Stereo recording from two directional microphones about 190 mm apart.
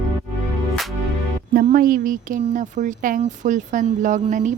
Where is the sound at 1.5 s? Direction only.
50° right (ahead or behind).